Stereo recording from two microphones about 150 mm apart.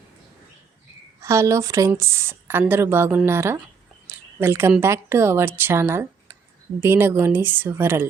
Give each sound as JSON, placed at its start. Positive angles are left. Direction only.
{"t": 1.2, "sound": "a woman's voice", "side_deg": -20}